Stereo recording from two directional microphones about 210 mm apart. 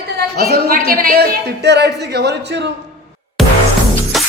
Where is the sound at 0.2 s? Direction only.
50° right (ahead or behind).